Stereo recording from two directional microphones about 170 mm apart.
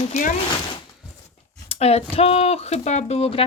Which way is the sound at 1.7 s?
35° left (ahead or behind).